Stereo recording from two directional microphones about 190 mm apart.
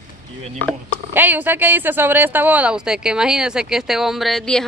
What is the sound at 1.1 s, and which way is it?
Speech, 10° right (ahead or behind).